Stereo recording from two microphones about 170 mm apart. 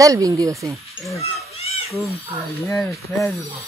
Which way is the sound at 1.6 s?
35° left (ahead or behind).